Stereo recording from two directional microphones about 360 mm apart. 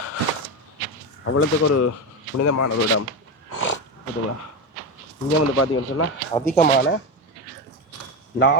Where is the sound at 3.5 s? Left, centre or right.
Left.